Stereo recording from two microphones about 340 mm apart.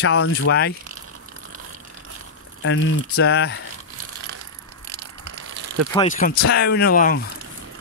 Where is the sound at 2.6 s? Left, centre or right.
Left.